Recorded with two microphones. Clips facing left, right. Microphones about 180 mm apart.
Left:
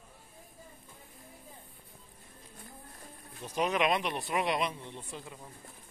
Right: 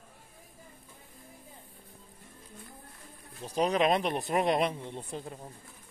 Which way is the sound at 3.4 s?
35° right (ahead or behind).